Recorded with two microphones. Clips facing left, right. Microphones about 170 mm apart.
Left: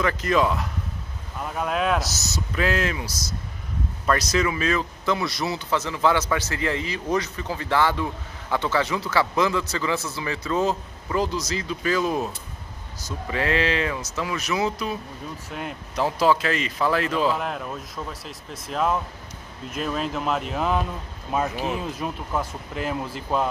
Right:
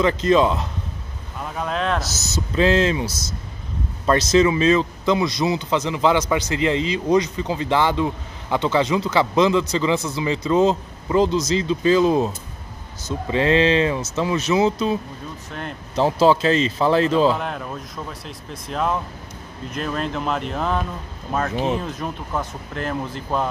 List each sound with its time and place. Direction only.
0.0 s a man's voice: 25° right (ahead or behind)
1.4 s speech: 5° left (ahead or behind)
2.0 s a man's voice: 25° right (ahead or behind)
17.4 s speech: centre (ahead or behind)